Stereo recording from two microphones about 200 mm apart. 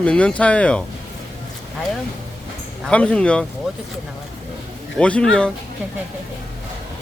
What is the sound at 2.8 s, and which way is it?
Speech, 5° left (ahead or behind).